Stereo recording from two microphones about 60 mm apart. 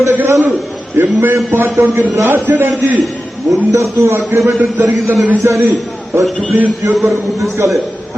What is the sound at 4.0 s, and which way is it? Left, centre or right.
A man's voice, right.